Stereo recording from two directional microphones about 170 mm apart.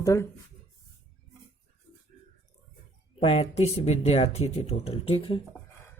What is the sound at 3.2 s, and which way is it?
Speech, 35° left (ahead or behind).